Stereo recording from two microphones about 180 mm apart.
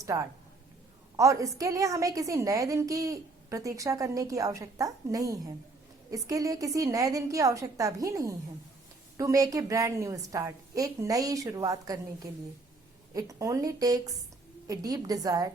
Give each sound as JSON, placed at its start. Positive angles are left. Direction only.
{"t": 0.0, "sound": "a woman's voice", "side_deg": -15}